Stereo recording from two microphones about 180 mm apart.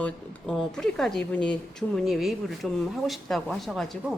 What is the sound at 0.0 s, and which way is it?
Speech, 5° left (ahead or behind).